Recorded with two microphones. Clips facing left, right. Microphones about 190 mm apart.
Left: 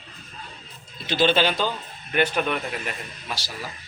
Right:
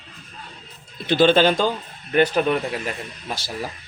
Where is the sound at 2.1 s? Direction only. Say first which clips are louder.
Right 5 dB; 35° right (ahead or behind).